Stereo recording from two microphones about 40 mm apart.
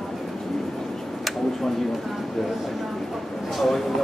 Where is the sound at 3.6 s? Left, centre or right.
Centre.